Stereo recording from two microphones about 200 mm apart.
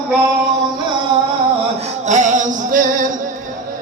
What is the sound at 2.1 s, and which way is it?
Music, 35° right (ahead or behind).